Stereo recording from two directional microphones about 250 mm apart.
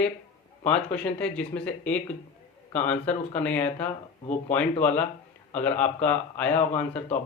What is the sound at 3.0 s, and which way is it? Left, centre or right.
Speech, centre.